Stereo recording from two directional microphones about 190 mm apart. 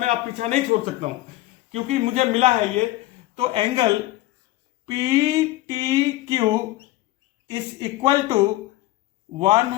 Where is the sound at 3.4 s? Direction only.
30° right (ahead or behind).